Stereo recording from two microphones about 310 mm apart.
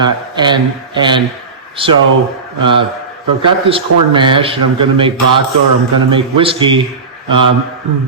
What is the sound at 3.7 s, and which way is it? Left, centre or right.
Speech, centre.